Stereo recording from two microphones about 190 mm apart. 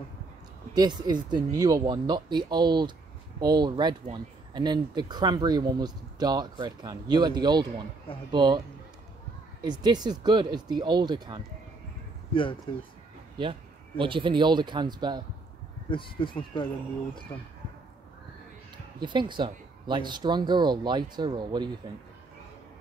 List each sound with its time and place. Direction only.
0.7 s speech: 20° right (ahead or behind)
9.6 s speech: 20° right (ahead or behind)
13.4 s speech: 25° right (ahead or behind)
15.9 s speech: 25° left (ahead or behind)
18.9 s speech: 25° right (ahead or behind)